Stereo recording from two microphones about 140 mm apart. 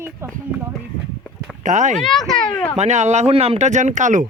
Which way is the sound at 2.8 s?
55° right (ahead or behind).